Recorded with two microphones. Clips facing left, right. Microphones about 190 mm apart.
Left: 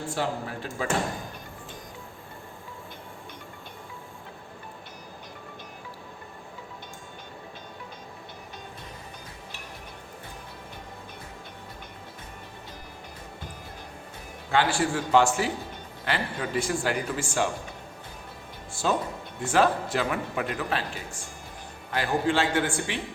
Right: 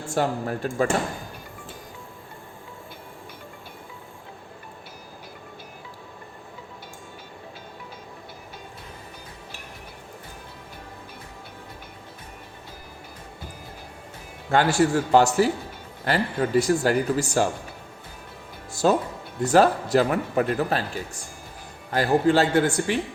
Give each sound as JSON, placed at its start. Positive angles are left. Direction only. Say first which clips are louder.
{"t": 0.1, "sound": "speech", "louder": "right 7 dB", "side_deg": -45}
{"t": 14.5, "sound": "a man's voice", "louder": "right 5 dB", "side_deg": -45}
{"t": 18.7, "sound": "a man's voice", "louder": "right 6 dB", "side_deg": -40}